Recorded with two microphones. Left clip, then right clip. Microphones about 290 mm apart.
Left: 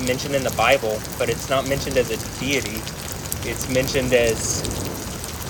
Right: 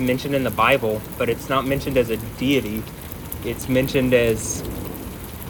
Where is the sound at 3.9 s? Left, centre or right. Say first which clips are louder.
Even; right.